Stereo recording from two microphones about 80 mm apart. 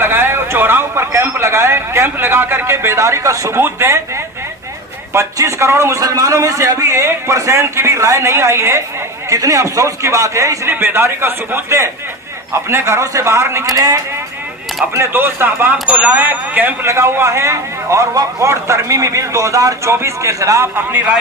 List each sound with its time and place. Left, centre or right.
0.0 s a man's voice: right
5.1 s a man's voice: right
10.7 s a man's voice: right
14.9 s a man's voice: right
20.7 s speech: right